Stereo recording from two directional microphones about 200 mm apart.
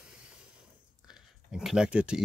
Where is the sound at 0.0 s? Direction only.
5° right (ahead or behind).